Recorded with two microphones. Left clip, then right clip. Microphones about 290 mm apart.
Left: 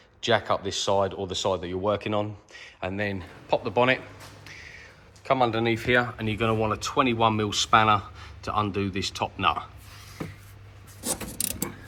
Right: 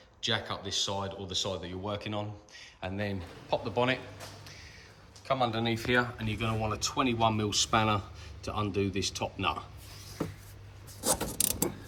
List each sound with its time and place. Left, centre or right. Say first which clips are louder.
0.2 s speech: left 9 dB; centre
4.4 s a sound: left 7 dB; centre
5.2 s speech: left 6 dB; centre